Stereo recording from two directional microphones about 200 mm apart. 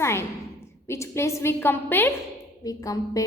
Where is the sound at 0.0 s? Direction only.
15° left (ahead or behind).